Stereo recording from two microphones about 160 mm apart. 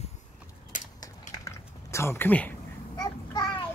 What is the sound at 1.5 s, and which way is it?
Mechanisms, 15° left (ahead or behind).